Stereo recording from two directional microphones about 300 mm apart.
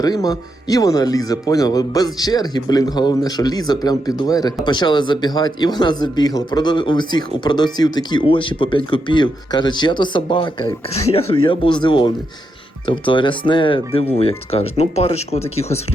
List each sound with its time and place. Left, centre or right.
0.0 s speech: centre